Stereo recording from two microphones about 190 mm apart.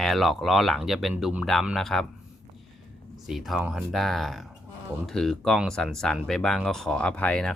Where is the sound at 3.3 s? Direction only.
Centre (ahead or behind).